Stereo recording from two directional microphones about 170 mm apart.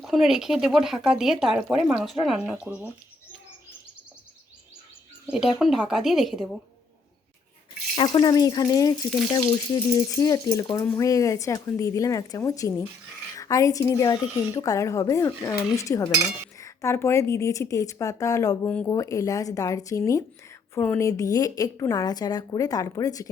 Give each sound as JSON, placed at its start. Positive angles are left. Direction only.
{"t": 0.0, "sound": "speech", "side_deg": 0}
{"t": 5.3, "sound": "speech", "side_deg": 0}
{"t": 7.9, "sound": "a woman's voice", "side_deg": 25}
{"t": 9.0, "sound": "speech", "side_deg": 0}
{"t": 9.7, "sound": "a woman's voice", "side_deg": 20}